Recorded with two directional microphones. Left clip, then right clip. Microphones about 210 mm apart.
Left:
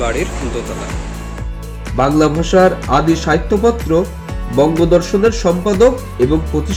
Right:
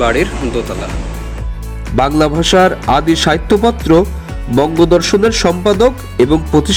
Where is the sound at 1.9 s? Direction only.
45° right (ahead or behind).